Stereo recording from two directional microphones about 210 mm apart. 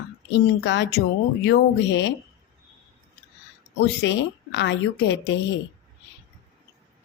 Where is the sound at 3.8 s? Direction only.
55° left (ahead or behind).